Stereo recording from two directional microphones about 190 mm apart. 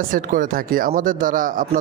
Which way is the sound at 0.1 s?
45° right (ahead or behind).